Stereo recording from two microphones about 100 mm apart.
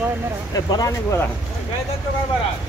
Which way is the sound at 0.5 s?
35° left (ahead or behind).